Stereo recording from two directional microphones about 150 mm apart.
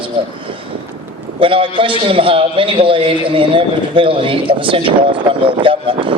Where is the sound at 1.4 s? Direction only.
35° right (ahead or behind).